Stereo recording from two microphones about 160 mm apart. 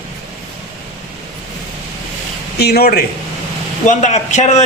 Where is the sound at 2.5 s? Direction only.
80° left.